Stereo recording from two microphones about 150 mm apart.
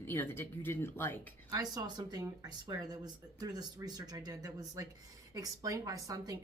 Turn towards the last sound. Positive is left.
turn(degrees=-20)  # may be behind; listen again after turning